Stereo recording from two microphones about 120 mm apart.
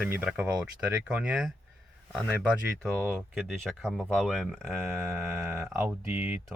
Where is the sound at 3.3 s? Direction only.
Centre (ahead or behind).